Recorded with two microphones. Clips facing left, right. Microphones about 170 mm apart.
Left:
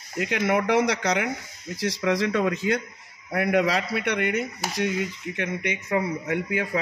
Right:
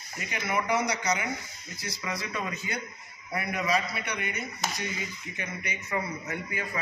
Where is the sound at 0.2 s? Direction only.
90° left.